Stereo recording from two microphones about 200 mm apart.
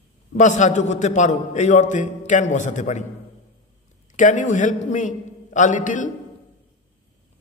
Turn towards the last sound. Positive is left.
turn(degrees=40)  # may be behind; listen again after turning